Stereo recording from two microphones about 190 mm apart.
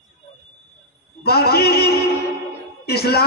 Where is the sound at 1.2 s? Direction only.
55° left (ahead or behind).